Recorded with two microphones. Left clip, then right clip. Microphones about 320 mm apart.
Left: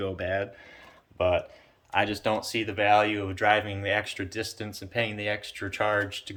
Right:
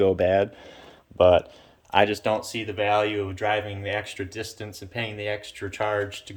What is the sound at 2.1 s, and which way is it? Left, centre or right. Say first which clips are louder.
Speech: right 2 dB; centre.